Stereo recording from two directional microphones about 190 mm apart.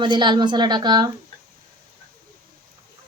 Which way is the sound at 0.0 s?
25° right (ahead or behind).